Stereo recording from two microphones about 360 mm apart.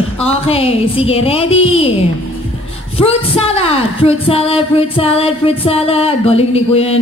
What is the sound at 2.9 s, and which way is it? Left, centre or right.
Speech, centre.